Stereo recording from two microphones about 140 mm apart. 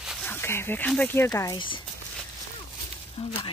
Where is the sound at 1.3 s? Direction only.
25° left (ahead or behind).